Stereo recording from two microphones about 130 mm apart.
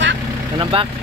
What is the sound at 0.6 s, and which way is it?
Speech, 45° right (ahead or behind).